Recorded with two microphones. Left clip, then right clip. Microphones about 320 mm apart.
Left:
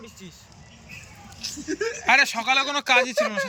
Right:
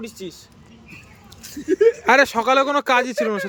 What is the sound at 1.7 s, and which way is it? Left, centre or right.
Speech, centre.